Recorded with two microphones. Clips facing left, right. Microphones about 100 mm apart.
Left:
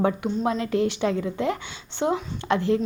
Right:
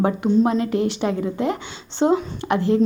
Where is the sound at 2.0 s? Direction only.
30° right (ahead or behind).